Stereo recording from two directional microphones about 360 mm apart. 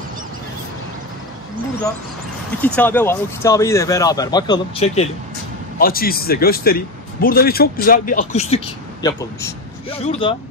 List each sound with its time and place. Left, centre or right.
2.6 s a man's voice: centre